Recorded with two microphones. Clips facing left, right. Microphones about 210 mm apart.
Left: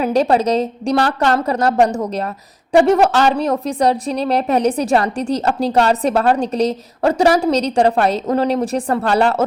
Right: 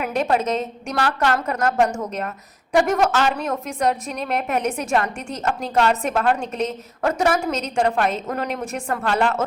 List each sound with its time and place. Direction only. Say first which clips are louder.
0.0 s a woman's voice: left 6 dB; 35° left (ahead or behind)